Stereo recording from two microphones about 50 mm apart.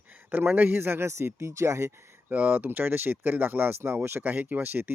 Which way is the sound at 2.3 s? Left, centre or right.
Right.